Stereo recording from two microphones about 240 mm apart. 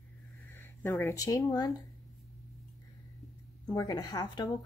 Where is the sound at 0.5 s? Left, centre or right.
Centre.